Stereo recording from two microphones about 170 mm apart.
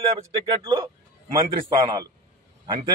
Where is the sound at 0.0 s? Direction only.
30° right (ahead or behind).